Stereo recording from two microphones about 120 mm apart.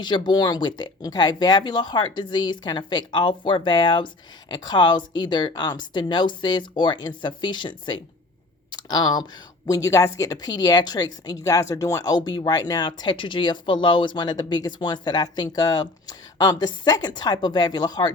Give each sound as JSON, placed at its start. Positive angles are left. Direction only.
{"t": 0.0, "sound": "speech", "side_deg": 40}